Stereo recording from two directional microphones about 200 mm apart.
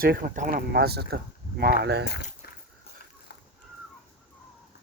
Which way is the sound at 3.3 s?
60° left (ahead or behind).